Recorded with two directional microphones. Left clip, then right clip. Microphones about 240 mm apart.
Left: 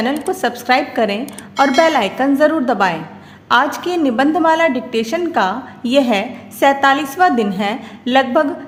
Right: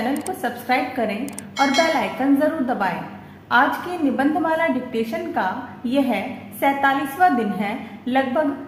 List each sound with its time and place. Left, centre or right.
0.3 s a woman's voice: left
1.2 s a woman's voice: centre
1.9 s a woman's voice: left